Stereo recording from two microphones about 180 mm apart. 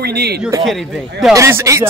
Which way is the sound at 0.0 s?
60° right (ahead or behind).